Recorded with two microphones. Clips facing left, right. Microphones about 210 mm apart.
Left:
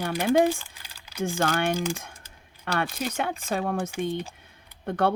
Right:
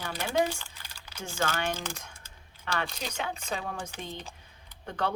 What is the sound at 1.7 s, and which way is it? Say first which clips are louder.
Speech: left 10 dB; 10° left (ahead or behind).